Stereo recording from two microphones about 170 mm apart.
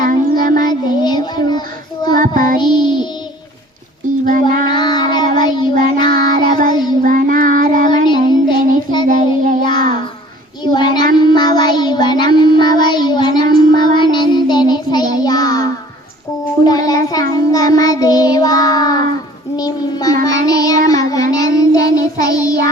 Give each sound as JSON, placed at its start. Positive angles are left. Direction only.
{"t": 0.4, "sound": "child singing", "side_deg": -50}
{"t": 0.7, "sound": "child singing", "side_deg": 25}
{"t": 2.1, "sound": "child singing", "side_deg": -55}
{"t": 2.6, "sound": "music", "side_deg": 25}
{"t": 4.3, "sound": "child singing", "side_deg": -50}
{"t": 4.7, "sound": "child singing", "side_deg": 25}
{"t": 6.3, "sound": "child singing", "side_deg": -50}
{"t": 8.0, "sound": "child singing", "side_deg": 25}
{"t": 9.0, "sound": "child singing", "side_deg": -50}
{"t": 10.6, "sound": "child singing", "side_deg": 25}
{"t": 16.6, "sound": "child singing", "side_deg": 20}